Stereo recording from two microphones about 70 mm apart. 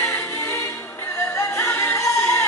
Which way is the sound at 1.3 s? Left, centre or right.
Left.